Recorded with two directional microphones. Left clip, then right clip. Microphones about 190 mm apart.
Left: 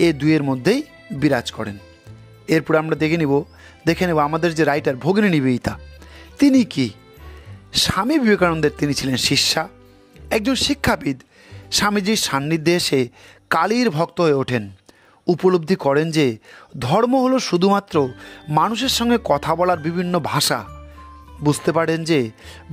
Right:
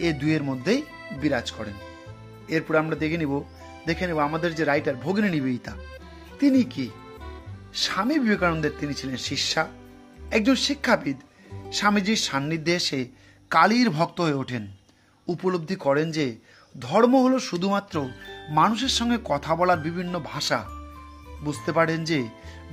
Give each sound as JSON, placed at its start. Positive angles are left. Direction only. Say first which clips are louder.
{"t": 0.0, "sound": "speech", "louder": "left 8 dB", "side_deg": 55}